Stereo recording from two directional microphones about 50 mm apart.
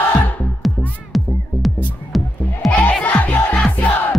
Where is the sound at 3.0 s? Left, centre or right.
Left.